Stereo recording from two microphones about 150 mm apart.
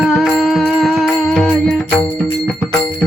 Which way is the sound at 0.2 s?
Centre (ahead or behind).